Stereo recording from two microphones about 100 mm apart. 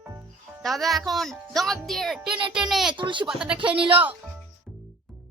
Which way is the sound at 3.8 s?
60° right (ahead or behind).